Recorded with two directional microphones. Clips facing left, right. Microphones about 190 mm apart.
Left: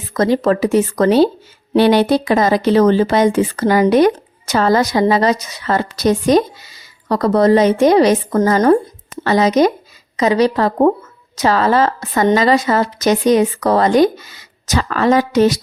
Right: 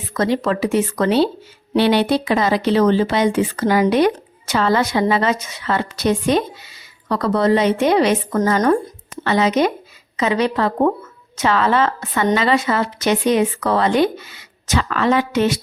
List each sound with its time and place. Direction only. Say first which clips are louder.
0.1 s speech: left 4 dB; 40° left (ahead or behind)